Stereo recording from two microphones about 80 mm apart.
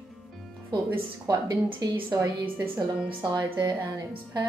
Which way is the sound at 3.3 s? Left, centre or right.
Right.